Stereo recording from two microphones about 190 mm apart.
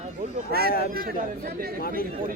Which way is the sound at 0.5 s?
55° right (ahead or behind).